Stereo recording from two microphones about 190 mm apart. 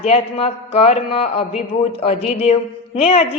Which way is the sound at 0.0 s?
30° left (ahead or behind).